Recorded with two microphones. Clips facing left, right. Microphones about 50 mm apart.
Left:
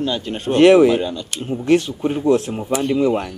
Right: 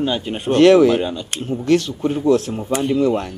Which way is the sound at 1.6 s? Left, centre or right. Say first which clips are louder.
Left 1 dB; left.